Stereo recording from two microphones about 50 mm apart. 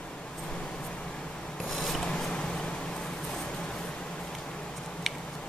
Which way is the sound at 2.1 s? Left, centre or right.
Centre.